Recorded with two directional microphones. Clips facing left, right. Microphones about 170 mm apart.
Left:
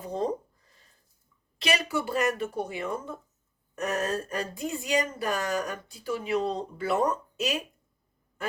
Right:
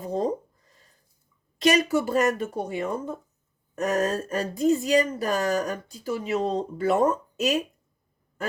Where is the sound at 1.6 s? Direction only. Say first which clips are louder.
Right 7 dB; 45° right (ahead or behind).